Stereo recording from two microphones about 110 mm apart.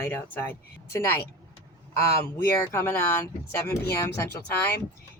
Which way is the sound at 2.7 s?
20° left (ahead or behind).